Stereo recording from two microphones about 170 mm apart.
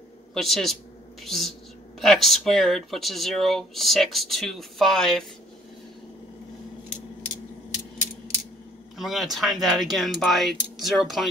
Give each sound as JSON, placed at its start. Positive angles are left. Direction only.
{"t": 0.3, "sound": "speech", "side_deg": 0}
{"t": 8.9, "sound": "speech", "side_deg": 0}